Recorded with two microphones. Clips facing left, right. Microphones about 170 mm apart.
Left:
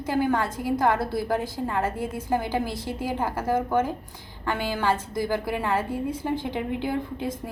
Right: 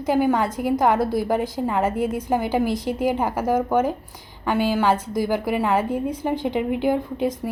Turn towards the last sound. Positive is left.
turn(degrees=-15)  # may be behind; listen again after turning